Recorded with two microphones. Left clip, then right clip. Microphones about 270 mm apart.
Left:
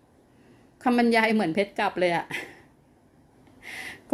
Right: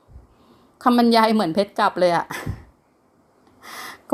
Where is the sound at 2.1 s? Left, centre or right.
Right.